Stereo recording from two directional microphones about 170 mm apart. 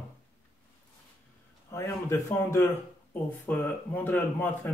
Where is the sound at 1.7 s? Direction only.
15° left (ahead or behind).